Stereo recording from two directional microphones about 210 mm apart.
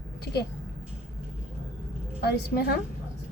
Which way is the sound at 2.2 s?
50° left (ahead or behind).